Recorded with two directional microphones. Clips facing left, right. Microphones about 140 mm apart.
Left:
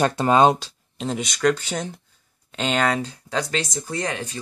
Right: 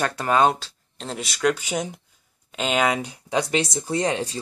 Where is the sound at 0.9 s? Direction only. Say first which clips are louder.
Left 5 dB; centre (ahead or behind).